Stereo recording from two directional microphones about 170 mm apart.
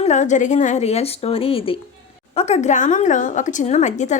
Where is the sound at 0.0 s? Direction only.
45° left (ahead or behind).